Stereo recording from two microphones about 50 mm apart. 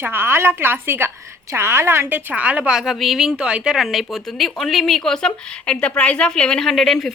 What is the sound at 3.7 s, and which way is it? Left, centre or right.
Speech, centre.